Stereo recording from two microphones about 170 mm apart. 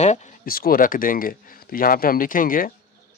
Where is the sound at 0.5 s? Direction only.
60° left (ahead or behind).